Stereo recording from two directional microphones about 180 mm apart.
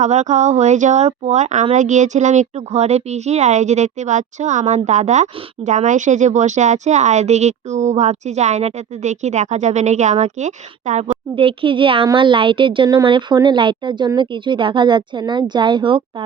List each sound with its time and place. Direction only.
0.0 s speech: 40° right (ahead or behind)
11.3 s a woman's voice: 30° right (ahead or behind)